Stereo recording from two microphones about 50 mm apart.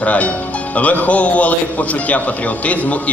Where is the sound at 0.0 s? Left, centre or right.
Left.